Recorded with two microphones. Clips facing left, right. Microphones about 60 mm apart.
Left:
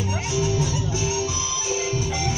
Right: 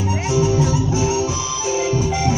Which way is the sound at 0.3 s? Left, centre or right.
Right.